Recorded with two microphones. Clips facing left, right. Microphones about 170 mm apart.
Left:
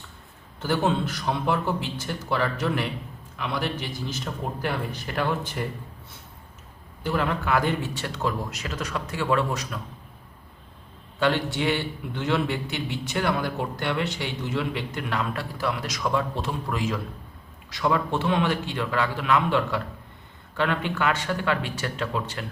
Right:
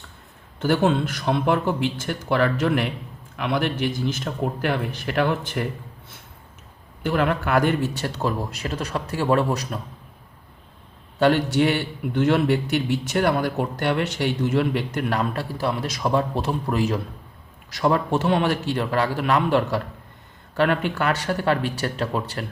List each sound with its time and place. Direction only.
0.6 s a man's voice: 60° right (ahead or behind)
7.0 s a man's voice: 60° right (ahead or behind)
7.9 s a man's voice: 35° right (ahead or behind)
11.2 s a man's voice: 45° right (ahead or behind)